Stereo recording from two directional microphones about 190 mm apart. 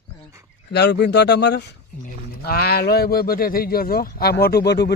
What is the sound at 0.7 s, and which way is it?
Speech, 60° left (ahead or behind).